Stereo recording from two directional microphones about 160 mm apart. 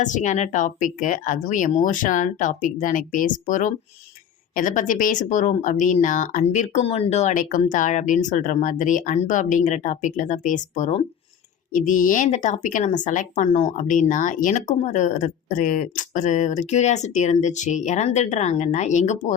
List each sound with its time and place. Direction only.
0.0 s speech: 50° left (ahead or behind)